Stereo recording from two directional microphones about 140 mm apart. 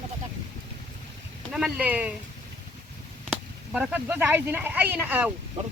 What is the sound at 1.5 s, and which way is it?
Speech, 5° right (ahead or behind).